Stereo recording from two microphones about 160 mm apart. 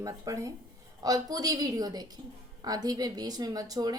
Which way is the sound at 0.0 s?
20° right (ahead or behind).